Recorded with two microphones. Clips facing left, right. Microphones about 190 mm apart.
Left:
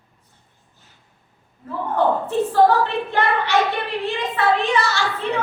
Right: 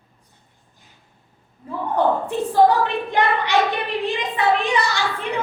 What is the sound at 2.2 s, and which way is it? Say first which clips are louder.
A woman's voice: left 1 dB; 15° right (ahead or behind).